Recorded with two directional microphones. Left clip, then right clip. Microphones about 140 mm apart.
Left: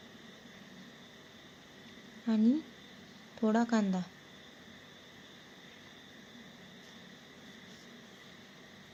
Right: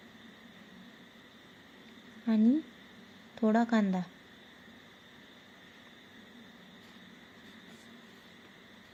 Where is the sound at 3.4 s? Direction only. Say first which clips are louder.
Right 2 dB; 15° right (ahead or behind).